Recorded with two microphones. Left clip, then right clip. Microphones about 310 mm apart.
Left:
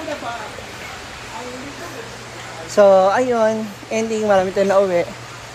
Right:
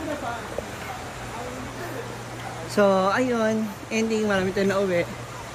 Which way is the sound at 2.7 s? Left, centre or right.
Centre.